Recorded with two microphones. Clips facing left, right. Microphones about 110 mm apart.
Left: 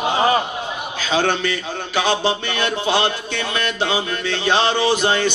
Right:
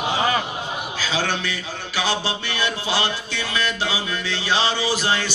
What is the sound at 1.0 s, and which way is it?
A man's voice, 55° left (ahead or behind).